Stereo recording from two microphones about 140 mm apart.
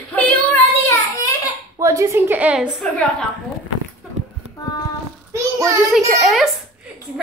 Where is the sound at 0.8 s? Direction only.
20° left (ahead or behind).